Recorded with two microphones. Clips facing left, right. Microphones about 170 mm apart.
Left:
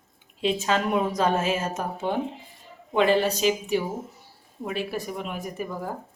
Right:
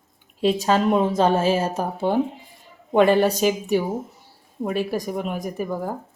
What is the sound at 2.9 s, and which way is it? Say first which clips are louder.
Speech: right 5 dB; 50° right (ahead or behind).